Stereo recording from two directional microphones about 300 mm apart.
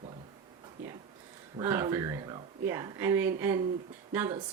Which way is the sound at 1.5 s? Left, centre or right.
Centre.